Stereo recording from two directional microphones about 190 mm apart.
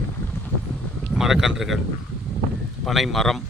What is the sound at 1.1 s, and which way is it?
Speech, 5° right (ahead or behind).